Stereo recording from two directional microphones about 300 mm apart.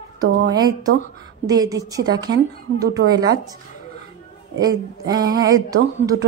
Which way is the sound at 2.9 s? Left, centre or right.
Right.